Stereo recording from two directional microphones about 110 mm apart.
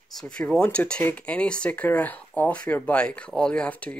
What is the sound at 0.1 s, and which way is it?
Speech, 5° left (ahead or behind).